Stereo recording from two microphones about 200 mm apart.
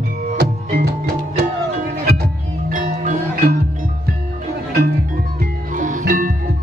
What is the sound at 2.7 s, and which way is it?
Music, 40° right (ahead or behind).